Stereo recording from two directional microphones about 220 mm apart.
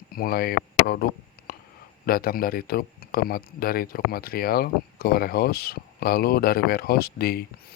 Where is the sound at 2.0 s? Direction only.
40° left (ahead or behind).